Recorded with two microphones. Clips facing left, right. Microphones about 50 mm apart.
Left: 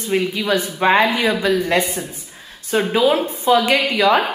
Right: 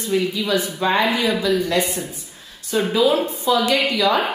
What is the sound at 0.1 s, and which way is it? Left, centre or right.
A woman's voice, left.